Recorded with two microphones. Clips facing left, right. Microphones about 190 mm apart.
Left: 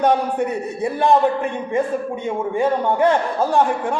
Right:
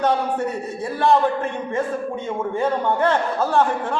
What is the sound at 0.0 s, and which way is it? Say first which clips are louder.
A man's voice: left 3 dB; 15° left (ahead or behind).